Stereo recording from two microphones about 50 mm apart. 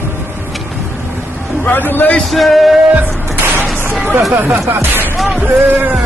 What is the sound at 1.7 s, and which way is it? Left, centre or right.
Speech, left.